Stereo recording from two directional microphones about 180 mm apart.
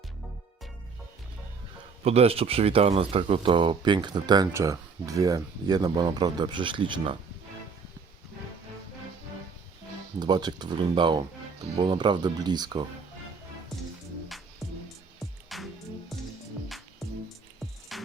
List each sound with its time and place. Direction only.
2.0 s speech: 35° right (ahead or behind)
10.2 s speech: 25° right (ahead or behind)
13.7 s music: centre (ahead or behind)
17.9 s music: centre (ahead or behind)